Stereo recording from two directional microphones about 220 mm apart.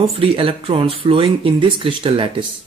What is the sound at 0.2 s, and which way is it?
Speech, 25° right (ahead or behind).